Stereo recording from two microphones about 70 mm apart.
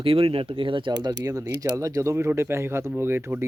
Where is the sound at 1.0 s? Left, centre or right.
Right.